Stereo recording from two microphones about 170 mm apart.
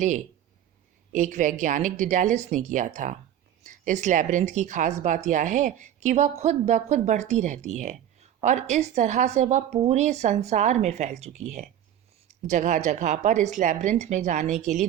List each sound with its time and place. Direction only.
1.1 s speech: 45° right (ahead or behind)